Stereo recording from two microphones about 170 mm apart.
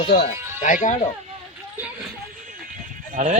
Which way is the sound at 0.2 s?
45° left (ahead or behind).